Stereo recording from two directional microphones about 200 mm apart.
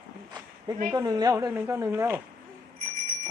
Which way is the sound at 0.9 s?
20° right (ahead or behind).